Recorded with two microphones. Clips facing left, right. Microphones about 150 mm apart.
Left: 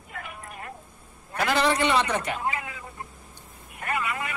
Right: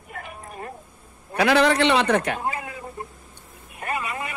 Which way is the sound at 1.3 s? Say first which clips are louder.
Right 5 dB; 70° right (ahead or behind).